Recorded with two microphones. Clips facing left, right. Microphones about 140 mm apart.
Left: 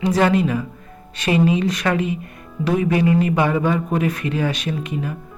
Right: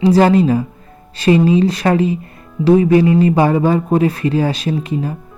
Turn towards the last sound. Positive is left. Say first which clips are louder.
# right 6 dB
turn(degrees=-35)  # may be behind; listen again after turning